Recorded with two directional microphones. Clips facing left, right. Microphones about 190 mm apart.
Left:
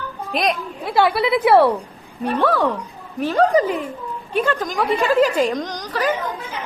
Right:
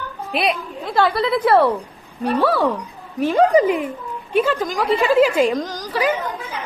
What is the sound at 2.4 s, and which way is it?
A woman's voice, 10° right (ahead or behind).